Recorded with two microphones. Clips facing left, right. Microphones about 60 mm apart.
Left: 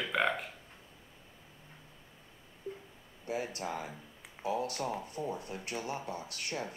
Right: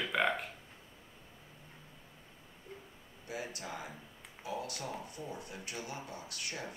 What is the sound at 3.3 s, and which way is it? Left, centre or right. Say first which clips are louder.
Speech: left 6 dB; left.